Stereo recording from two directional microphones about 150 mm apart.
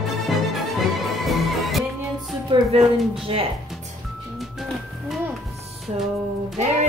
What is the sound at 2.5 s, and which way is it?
Music, 30° right (ahead or behind).